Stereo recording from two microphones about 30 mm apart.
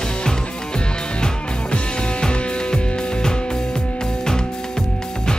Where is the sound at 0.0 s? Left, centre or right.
Left.